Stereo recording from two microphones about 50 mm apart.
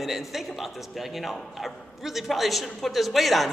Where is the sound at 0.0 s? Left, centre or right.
Centre.